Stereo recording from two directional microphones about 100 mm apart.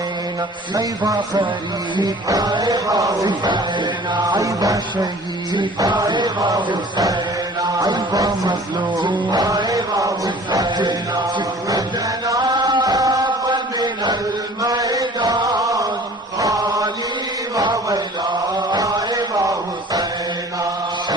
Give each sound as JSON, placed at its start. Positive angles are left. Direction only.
{"t": 0.7, "sound": "speech", "side_deg": -45}
{"t": 9.0, "sound": "music", "side_deg": -45}
{"t": 12.2, "sound": "chant", "side_deg": -40}
{"t": 18.7, "sound": "music", "side_deg": -40}